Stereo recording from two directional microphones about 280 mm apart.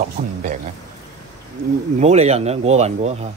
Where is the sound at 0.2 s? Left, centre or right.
Right.